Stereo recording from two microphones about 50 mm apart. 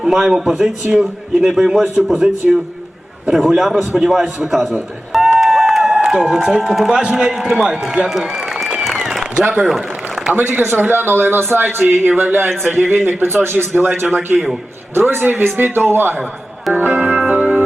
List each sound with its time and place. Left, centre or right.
0.0 s a man's voice: centre
5.1 s a sound: centre
7.0 s a man's voice: centre
8.8 s applause: centre
10.6 s speech: right
16.7 s music: right